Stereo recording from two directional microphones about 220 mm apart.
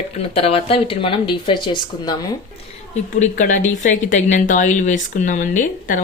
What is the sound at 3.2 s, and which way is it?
Speech, 35° left (ahead or behind).